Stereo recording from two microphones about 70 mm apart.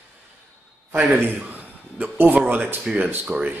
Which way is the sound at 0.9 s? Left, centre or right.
Right.